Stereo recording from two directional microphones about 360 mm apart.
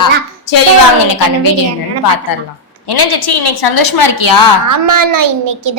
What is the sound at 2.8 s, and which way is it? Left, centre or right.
A woman's voice, left.